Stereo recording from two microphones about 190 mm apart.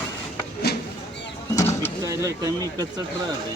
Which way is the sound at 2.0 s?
20° right (ahead or behind).